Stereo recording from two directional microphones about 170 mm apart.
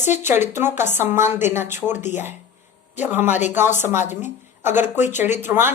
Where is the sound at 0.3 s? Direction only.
15° right (ahead or behind).